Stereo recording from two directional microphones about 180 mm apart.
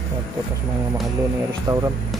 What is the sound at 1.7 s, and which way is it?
Speech, 15° right (ahead or behind).